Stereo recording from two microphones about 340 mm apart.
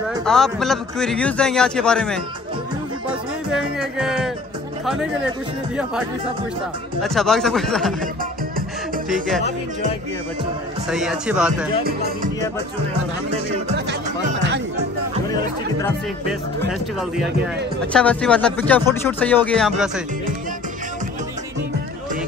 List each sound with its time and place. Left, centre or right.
0.2 s a man's voice: centre
3.5 s music: centre
7.0 s a man's voice: centre
8.0 s music: right
10.9 s a man's voice: centre
11.8 s music: right
17.9 s a man's voice: centre